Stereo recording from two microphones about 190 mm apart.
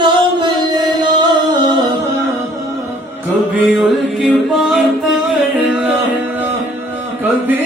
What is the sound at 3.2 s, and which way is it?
Music, centre (ahead or behind).